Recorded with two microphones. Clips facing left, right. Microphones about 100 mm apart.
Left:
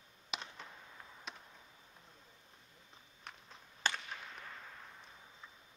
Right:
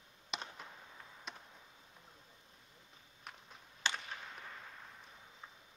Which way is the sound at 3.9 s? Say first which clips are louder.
Left 1 dB; 45° left (ahead or behind).